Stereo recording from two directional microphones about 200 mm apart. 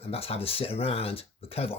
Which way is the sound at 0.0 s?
30° left (ahead or behind).